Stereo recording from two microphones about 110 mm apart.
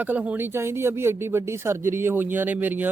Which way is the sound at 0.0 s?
15° right (ahead or behind).